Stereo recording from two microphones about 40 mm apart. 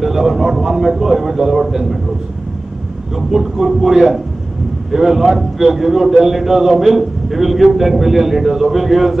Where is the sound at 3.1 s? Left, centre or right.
Centre.